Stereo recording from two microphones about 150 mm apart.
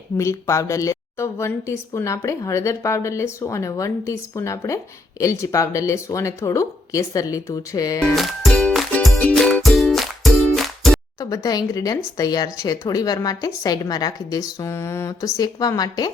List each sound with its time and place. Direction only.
0.2 s a woman's voice: 20° left (ahead or behind)
8.1 s music: centre (ahead or behind)
11.2 s a woman's voice: 25° left (ahead or behind)